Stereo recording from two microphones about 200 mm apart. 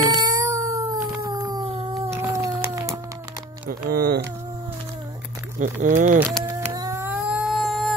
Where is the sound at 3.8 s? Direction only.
45° right (ahead or behind).